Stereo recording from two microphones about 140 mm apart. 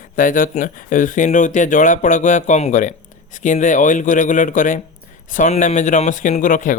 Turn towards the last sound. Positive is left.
turn(degrees=65)  # may be behind; listen again after turning